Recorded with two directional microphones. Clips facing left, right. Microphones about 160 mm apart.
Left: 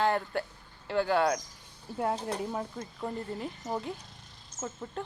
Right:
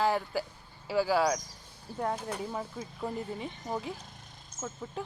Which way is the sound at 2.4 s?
Centre (ahead or behind).